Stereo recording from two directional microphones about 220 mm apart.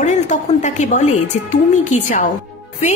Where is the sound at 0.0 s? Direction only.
30° left (ahead or behind).